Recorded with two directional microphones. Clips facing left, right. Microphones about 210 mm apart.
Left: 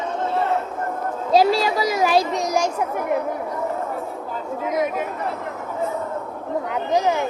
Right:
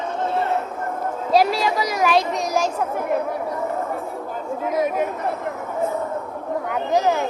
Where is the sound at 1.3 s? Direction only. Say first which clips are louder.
Left 2 dB; 25° left (ahead or behind).